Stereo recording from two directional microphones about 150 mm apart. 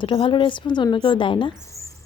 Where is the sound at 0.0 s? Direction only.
35° left (ahead or behind).